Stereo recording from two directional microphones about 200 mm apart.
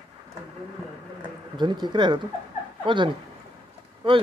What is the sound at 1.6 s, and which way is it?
Speech, 20° right (ahead or behind).